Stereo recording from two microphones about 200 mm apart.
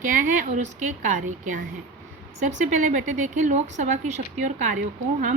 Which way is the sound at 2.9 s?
35° right (ahead or behind).